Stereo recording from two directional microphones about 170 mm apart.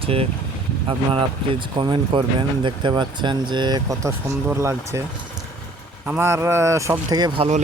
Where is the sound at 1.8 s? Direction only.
30° right (ahead or behind).